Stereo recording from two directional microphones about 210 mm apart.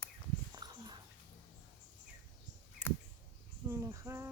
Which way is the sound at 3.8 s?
15° right (ahead or behind).